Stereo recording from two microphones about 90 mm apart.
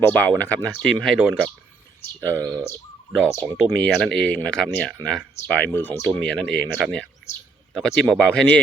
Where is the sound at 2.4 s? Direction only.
40° right (ahead or behind).